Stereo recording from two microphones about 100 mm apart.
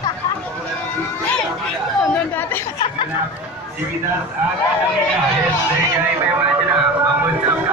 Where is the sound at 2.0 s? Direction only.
20° left (ahead or behind).